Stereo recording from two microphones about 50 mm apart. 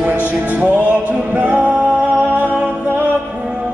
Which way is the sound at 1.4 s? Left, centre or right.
Right.